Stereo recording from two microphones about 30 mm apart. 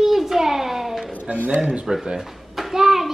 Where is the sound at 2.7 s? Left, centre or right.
Centre.